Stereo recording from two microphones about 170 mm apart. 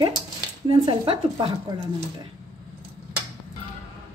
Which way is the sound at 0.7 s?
30° right (ahead or behind).